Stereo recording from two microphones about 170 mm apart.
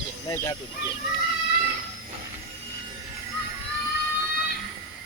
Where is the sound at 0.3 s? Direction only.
20° left (ahead or behind).